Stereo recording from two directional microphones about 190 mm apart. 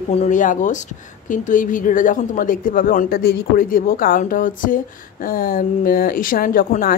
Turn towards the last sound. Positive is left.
turn(degrees=50)  # may be behind; listen again after turning